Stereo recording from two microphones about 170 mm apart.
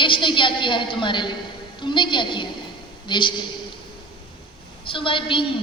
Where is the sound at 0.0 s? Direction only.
30° left (ahead or behind).